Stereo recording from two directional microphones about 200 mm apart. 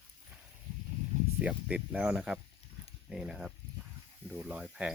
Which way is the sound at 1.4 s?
5° right (ahead or behind).